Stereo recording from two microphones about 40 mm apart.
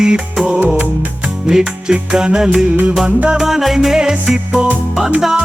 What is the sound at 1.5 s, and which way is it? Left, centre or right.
Music, centre.